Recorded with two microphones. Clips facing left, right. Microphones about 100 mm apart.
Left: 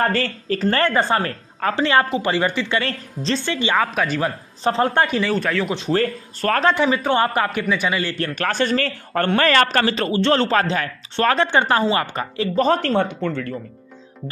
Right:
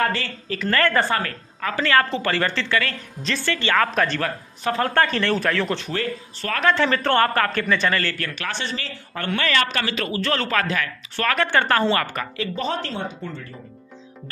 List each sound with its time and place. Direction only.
0.0 s speech: 40° left (ahead or behind)
0.7 s a man's voice: 25° left (ahead or behind)
2.8 s a man's voice: 30° left (ahead or behind)
3.9 s speech: 5° left (ahead or behind)
4.6 s a man's voice: 25° left (ahead or behind)
5.2 s speech: centre (ahead or behind)
5.9 s speech: 40° left (ahead or behind)
6.7 s speech: 10° left (ahead or behind)
8.4 s a man's voice: 45° left (ahead or behind); by 12.4 s 25° left (ahead or behind)
12.5 s speech: 45° left (ahead or behind); by 13.5 s 70° left (ahead or behind)